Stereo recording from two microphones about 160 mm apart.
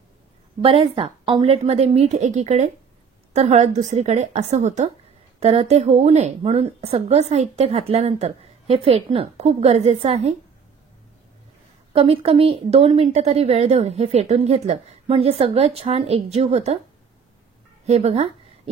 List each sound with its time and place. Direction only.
0.6 s a woman's voice: 35° right (ahead or behind)
11.9 s a woman's voice: 35° right (ahead or behind)
17.8 s a woman's voice: 40° right (ahead or behind)